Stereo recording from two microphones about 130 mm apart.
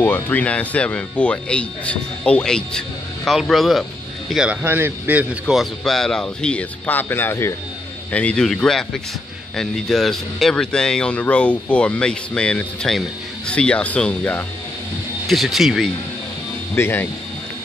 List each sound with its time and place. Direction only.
0.0 s a man's voice: 15° left (ahead or behind); by 4.6 s 5° right (ahead or behind)
4.6 s a man's voice: 15° right (ahead or behind); by 14.4 s 10° left (ahead or behind)
15.2 s a man's voice: centre (ahead or behind)
16.7 s speech: 15° left (ahead or behind)